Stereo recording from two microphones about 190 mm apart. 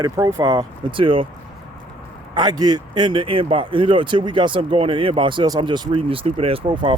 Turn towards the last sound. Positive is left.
turn(degrees=-25)  # may be behind; listen again after turning